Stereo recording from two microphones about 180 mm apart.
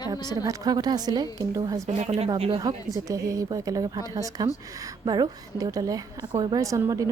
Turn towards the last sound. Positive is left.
turn(degrees=-20)  # may be behind; listen again after turning